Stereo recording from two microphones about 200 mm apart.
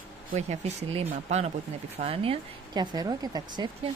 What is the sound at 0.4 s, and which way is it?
Speech, 35° right (ahead or behind).